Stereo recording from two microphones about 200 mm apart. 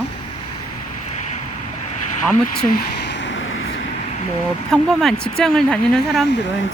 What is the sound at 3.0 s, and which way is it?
Vehicle, 65° left (ahead or behind).